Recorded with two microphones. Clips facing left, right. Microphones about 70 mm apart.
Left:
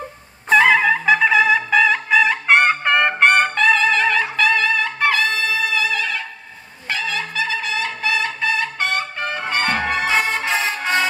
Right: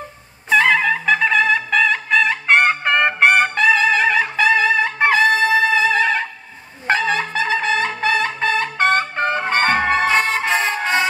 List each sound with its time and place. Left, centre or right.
0.5 s trumpet: centre; by 6.2 s right
6.9 s brass instrument: right
10.0 s music: centre